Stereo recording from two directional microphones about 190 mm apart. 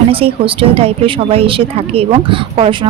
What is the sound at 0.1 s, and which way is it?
A woman's voice, 30° right (ahead or behind).